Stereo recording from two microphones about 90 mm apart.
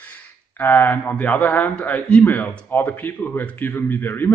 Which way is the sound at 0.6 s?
20° left (ahead or behind).